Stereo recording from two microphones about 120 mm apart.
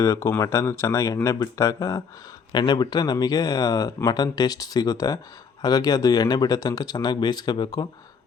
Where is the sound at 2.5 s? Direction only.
35° left (ahead or behind).